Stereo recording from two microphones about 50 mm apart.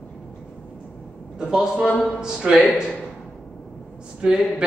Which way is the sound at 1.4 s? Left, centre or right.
Centre.